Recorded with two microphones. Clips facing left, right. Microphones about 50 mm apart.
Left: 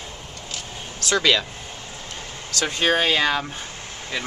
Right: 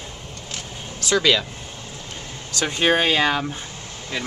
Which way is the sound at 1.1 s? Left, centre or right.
Centre.